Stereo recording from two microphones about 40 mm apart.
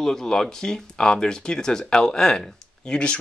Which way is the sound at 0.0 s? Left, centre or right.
Centre.